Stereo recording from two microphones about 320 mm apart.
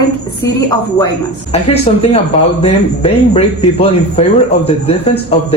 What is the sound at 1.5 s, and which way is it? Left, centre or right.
Speech, centre.